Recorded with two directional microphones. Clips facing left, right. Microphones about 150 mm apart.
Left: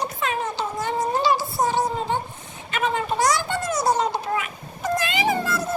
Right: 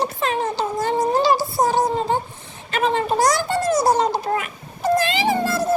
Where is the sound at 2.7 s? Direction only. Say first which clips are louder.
Right 4 dB; 35° right (ahead or behind).